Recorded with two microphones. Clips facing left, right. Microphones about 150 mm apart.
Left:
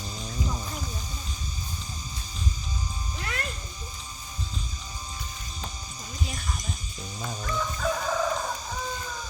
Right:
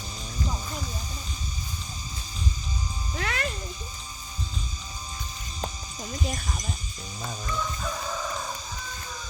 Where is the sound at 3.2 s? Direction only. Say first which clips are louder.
Right 4 dB; 90° right.